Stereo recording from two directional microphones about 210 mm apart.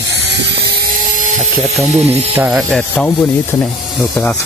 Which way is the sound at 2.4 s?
5° right (ahead or behind).